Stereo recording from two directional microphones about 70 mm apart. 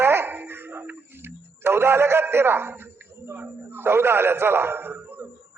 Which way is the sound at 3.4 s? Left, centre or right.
Right.